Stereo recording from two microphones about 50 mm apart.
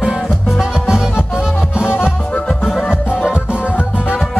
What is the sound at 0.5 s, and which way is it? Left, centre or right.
Music, centre.